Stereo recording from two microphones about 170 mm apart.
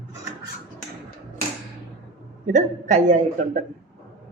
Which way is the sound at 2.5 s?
45° right (ahead or behind).